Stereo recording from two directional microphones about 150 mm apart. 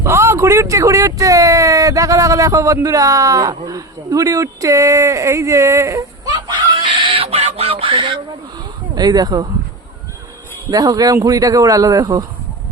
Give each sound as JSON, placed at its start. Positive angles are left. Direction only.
{"t": 0.0, "sound": "speech", "side_deg": -20}
{"t": 8.5, "sound": "a sound", "side_deg": -25}
{"t": 10.7, "sound": "speech", "side_deg": -25}